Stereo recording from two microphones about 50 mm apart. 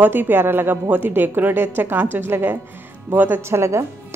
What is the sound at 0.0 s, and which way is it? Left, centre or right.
A woman's voice, right.